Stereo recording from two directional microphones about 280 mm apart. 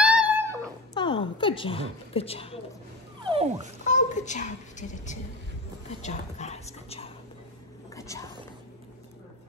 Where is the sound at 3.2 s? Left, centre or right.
Centre.